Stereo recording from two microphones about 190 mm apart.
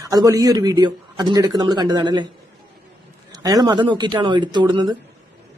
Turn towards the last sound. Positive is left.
turn(degrees=-25)  # may be behind; listen again after turning